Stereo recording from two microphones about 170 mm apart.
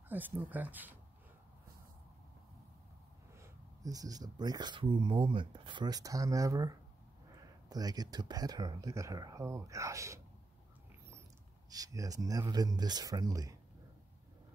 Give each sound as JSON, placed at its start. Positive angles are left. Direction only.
{"t": 0.1, "sound": "speech", "side_deg": -10}
{"t": 3.3, "sound": "speech", "side_deg": -20}
{"t": 11.7, "sound": "speech", "side_deg": -20}